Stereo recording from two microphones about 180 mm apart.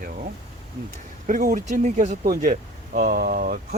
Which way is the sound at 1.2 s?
45° right (ahead or behind).